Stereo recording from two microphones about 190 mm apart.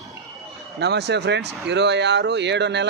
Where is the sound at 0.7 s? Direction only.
60° right (ahead or behind).